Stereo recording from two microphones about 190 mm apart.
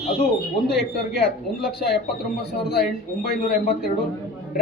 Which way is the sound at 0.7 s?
55° left (ahead or behind).